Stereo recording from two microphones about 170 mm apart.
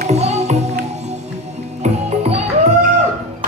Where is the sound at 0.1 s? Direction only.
40° right (ahead or behind).